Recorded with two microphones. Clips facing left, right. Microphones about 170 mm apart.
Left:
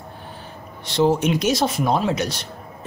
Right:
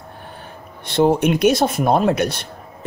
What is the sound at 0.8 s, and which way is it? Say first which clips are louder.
A man's voice: right 3 dB; 55° right (ahead or behind).